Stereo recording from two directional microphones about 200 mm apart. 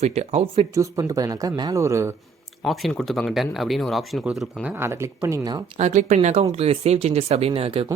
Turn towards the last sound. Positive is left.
turn(degrees=-30)  # may be behind; listen again after turning